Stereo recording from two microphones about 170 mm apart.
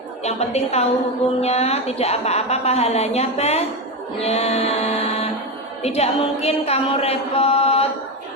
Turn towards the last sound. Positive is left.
turn(degrees=35)  # may be behind; listen again after turning